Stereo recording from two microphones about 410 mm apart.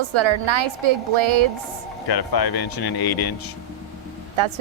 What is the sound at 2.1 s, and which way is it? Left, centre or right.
Speech, left.